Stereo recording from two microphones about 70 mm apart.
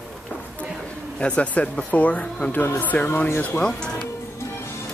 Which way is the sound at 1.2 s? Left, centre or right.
Centre.